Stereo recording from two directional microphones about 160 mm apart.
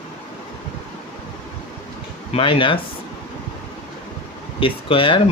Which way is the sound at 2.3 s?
35° left (ahead or behind).